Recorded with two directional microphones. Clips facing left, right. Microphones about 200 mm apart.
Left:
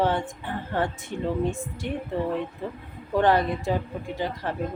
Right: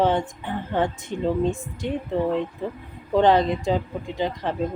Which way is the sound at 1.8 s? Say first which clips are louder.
Right 4 dB; 15° right (ahead or behind).